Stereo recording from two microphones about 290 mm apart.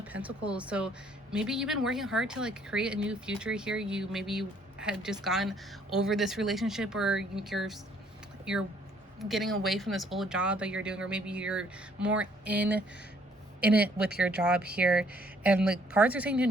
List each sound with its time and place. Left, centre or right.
0.0 s speech: centre
9.1 s speech: centre